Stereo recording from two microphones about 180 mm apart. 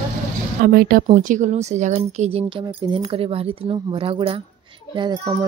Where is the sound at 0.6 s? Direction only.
55° right (ahead or behind).